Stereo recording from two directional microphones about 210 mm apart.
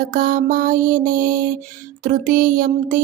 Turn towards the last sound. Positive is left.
turn(degrees=-40)  # may be behind; listen again after turning